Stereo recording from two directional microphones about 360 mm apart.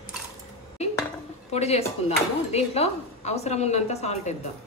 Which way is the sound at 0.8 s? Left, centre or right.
Centre.